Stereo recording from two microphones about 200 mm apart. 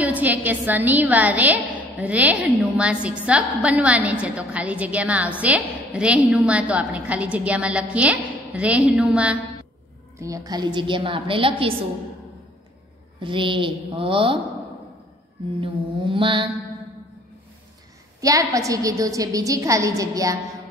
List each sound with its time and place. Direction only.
0.0 s a woman's voice: 10° right (ahead or behind)
10.2 s a woman's voice: 20° right (ahead or behind)
13.2 s a woman's voice: 25° right (ahead or behind)
15.5 s a woman's voice: 25° right (ahead or behind)
18.5 s a woman's voice: 15° right (ahead or behind)